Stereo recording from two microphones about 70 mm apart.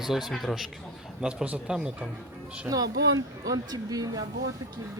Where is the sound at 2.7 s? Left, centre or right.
Right.